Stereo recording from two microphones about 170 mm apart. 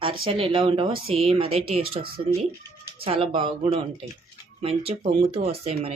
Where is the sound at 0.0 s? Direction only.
30° right (ahead or behind).